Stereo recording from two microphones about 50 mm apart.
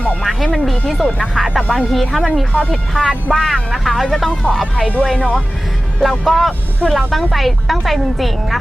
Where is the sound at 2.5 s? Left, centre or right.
Left.